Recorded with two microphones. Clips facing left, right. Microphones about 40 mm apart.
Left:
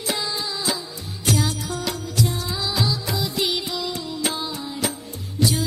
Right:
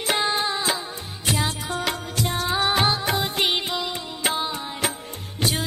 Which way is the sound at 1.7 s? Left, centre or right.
Right.